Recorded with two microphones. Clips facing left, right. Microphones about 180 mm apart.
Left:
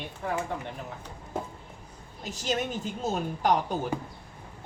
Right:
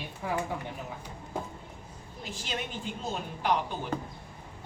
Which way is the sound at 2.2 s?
40° left (ahead or behind).